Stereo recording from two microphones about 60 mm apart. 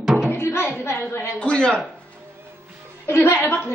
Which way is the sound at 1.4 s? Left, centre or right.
Centre.